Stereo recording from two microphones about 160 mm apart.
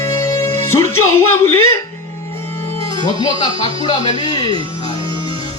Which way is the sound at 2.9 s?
25° left (ahead or behind).